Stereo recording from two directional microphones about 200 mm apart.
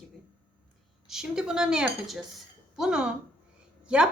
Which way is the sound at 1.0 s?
Centre (ahead or behind).